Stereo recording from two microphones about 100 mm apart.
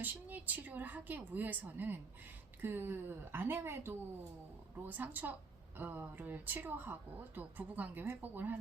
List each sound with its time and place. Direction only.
0.0 s a woman's voice: 15° right (ahead or behind)